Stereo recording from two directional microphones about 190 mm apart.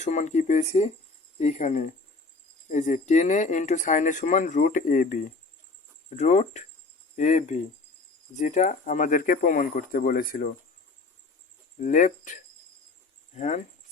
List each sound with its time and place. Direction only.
0.0 s speech: 40° left (ahead or behind)
11.8 s speech: 40° left (ahead or behind)